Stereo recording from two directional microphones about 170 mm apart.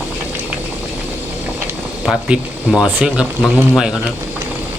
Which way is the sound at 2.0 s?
5° right (ahead or behind).